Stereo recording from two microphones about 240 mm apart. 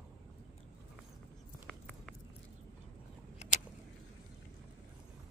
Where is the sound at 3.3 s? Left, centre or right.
Left.